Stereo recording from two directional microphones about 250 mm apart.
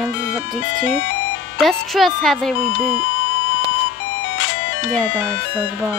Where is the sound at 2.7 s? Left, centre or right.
Left.